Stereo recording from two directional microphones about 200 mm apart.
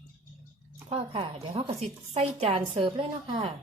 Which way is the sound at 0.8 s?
30° right (ahead or behind).